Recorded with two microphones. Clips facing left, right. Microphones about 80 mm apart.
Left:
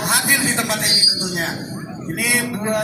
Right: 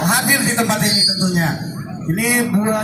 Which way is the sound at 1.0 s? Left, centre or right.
Centre.